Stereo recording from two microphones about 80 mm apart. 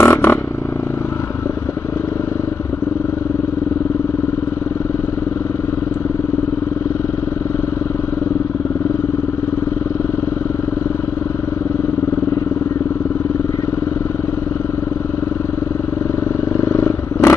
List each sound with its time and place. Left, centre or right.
0.0 s vehicle: left
16.6 s vehicle: left